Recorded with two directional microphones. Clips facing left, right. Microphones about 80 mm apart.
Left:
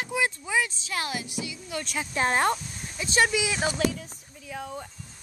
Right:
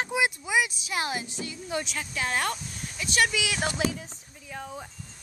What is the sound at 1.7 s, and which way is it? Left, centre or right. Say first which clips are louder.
Speech: right 3 dB; right.